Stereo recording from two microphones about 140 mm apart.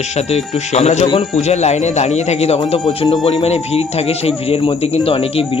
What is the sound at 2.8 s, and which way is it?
Speech, 35° left (ahead or behind).